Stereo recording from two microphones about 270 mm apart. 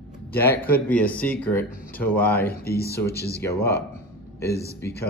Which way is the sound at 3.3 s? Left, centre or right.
Centre.